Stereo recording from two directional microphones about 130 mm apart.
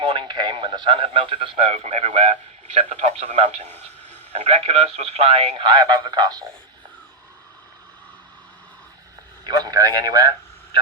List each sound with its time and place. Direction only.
0.0 s a man's voice: 35° right (ahead or behind)
1.8 s speech: 60° right (ahead or behind)
3.7 s a sound: 15° left (ahead or behind)
4.3 s speech: 60° right (ahead or behind); by 6.4 s 30° right (ahead or behind)
9.5 s a man's voice: 30° right (ahead or behind)